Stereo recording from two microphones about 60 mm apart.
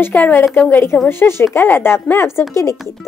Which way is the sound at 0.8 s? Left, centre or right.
Left.